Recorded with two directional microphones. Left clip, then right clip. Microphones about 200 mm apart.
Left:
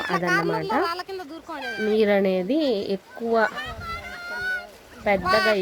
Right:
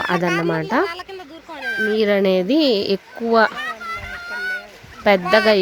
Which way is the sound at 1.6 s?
10° left (ahead or behind).